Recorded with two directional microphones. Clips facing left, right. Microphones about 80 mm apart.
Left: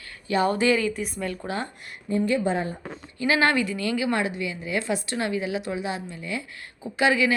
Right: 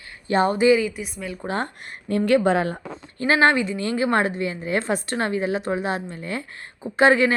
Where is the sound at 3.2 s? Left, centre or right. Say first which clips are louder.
Right 4 dB; right.